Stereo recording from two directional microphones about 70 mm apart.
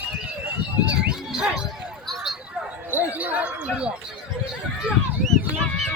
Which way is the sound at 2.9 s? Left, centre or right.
Right.